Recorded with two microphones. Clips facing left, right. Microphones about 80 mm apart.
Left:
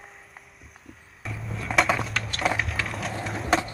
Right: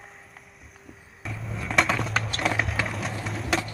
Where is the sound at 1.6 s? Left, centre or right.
Centre.